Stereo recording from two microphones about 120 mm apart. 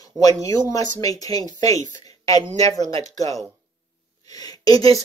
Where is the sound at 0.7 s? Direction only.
30° left (ahead or behind).